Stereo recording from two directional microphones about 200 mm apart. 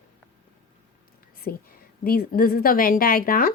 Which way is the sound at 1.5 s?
50° left (ahead or behind).